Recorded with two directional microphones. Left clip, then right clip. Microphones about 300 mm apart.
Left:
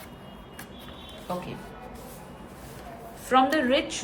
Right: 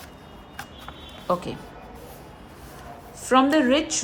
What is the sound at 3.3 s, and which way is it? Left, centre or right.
Speech, centre.